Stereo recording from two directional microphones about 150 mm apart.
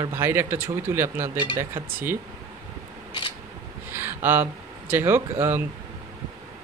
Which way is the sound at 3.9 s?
15° right (ahead or behind).